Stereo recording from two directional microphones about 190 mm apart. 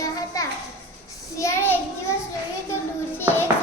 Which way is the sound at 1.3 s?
15° left (ahead or behind).